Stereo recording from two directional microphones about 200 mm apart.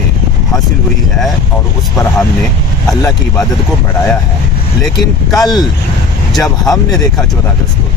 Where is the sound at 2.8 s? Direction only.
15° left (ahead or behind).